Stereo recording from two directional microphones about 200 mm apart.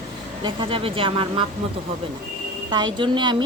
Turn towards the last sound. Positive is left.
turn(degrees=-25)  # may be behind; listen again after turning